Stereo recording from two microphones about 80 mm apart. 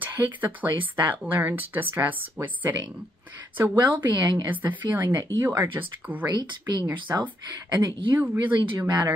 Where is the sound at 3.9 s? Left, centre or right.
Right.